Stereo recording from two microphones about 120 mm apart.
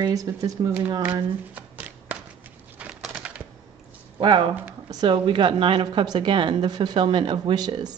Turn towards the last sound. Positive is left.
turn(degrees=-35)  # may be behind; listen again after turning